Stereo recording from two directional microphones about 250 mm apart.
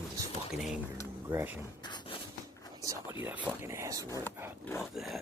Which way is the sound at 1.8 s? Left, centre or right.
Centre.